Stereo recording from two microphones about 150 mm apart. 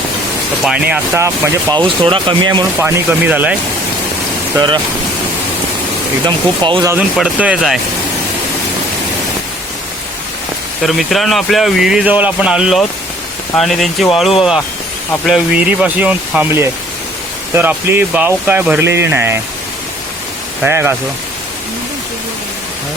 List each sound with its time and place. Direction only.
0.6 s speech: 5° right (ahead or behind)
1.1 s speech: 20° right (ahead or behind)
1.8 s speech: 35° right (ahead or behind)
2.7 s speech: 15° right (ahead or behind)
6.2 s speech: 30° right (ahead or behind)
7.2 s speech: 10° right (ahead or behind)
10.8 s speech: centre (ahead or behind); by 19.4 s 15° right (ahead or behind)
20.6 s speech: 15° right (ahead or behind)